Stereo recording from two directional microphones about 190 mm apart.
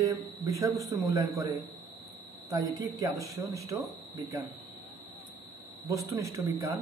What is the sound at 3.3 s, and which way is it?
Speech, 15° right (ahead or behind).